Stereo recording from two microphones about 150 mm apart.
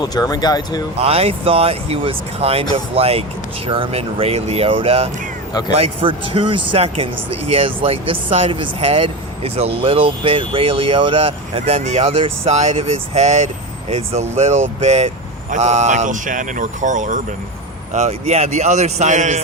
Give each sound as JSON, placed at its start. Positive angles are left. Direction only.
{"t": 0.0, "sound": "speech", "side_deg": 25}
{"t": 0.9, "sound": "speech", "side_deg": -40}